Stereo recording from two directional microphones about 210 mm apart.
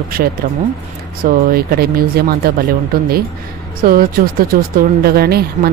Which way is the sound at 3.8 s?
45° right (ahead or behind).